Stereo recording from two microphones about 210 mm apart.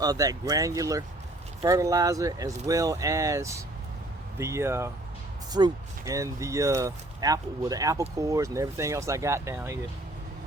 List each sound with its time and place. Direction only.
0.0 s speech: 15° right (ahead or behind)